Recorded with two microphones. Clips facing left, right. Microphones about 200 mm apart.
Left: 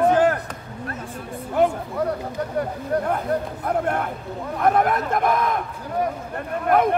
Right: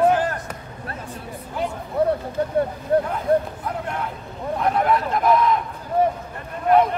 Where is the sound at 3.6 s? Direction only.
55° left (ahead or behind).